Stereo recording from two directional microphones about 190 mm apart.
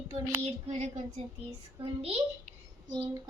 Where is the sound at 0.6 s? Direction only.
35° right (ahead or behind).